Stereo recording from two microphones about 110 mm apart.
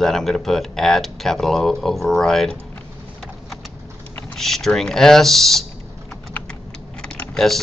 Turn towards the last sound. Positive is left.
turn(degrees=10)  # may be behind; listen again after turning